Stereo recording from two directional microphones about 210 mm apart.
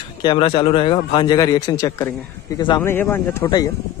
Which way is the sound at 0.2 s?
25° left (ahead or behind).